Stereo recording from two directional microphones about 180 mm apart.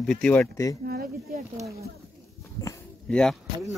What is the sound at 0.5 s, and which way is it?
Speech, 15° left (ahead or behind).